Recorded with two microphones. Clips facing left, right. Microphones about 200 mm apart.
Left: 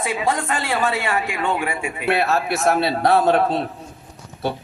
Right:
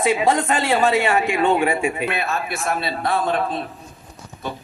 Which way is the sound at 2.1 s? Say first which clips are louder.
Left 5 dB; 70° left (ahead or behind).